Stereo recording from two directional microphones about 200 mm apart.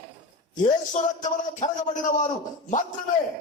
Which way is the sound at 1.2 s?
35° left (ahead or behind).